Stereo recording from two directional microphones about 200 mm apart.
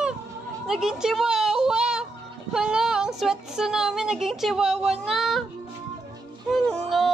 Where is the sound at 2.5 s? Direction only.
5° right (ahead or behind).